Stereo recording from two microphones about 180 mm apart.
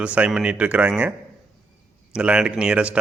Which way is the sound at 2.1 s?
5° right (ahead or behind).